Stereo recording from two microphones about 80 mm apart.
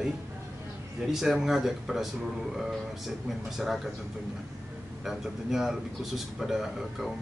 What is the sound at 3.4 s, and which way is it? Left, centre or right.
Speech, centre.